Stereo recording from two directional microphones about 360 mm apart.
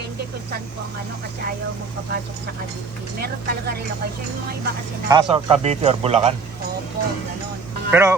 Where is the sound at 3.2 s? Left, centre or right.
Right.